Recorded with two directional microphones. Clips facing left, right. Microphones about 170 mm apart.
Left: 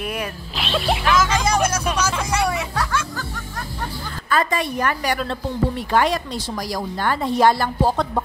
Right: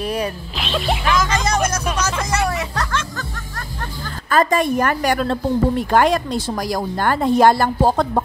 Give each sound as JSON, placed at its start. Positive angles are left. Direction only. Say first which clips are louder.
{"t": 0.0, "sound": "zipper", "louder": "right 5 dB", "side_deg": -35}
{"t": 0.6, "sound": "speech", "louder": "even", "side_deg": 0}
{"t": 2.3, "sound": "music", "louder": "even", "side_deg": 0}
{"t": 4.3, "sound": "a woman's voice", "louder": "right 5 dB", "side_deg": -45}